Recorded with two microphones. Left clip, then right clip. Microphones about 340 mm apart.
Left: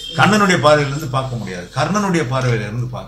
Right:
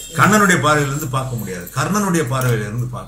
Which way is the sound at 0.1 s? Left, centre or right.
Centre.